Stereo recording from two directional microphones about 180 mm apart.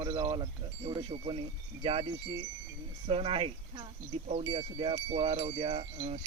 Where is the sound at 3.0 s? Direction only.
35° right (ahead or behind).